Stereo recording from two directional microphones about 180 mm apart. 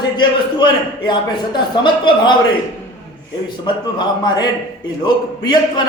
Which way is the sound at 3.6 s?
25° left (ahead or behind).